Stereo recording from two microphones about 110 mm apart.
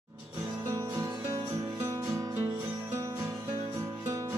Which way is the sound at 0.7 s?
25° right (ahead or behind).